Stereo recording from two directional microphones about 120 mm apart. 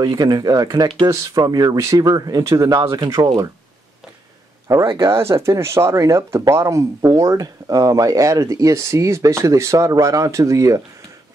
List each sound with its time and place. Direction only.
0.0 s speech: 35° right (ahead or behind)
4.9 s speech: 25° right (ahead or behind)